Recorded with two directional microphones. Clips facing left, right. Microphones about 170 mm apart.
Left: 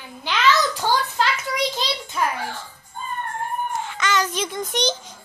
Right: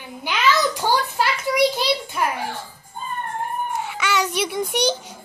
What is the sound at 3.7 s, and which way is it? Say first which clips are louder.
A child's voice: even; 10° right (ahead or behind).